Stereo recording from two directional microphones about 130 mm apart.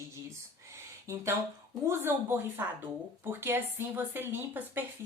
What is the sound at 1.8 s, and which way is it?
Speech, 20° right (ahead or behind).